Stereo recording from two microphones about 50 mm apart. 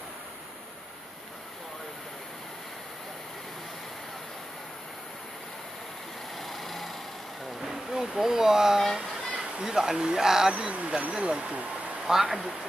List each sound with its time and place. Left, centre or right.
6.3 s vehicle: centre
7.6 s speech: centre
10.5 s speech: right
12.1 s speech: centre